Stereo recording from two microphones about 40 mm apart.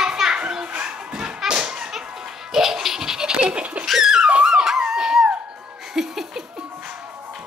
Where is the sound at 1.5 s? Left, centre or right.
Right.